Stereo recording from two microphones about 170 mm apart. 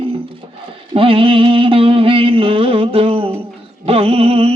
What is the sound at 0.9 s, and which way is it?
Music, 30° right (ahead or behind).